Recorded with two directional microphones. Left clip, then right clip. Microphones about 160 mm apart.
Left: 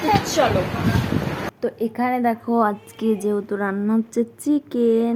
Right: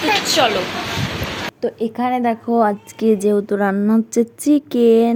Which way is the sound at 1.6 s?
15° right (ahead or behind).